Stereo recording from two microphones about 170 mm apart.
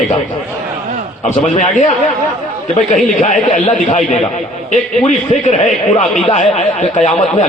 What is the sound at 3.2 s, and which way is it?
Speech, 45° left (ahead or behind).